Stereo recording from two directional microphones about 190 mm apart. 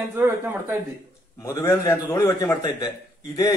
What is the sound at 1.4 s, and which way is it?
A man's voice, 15° left (ahead or behind).